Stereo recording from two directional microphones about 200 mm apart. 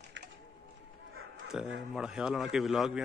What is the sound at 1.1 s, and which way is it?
Bow-wow, 80° right.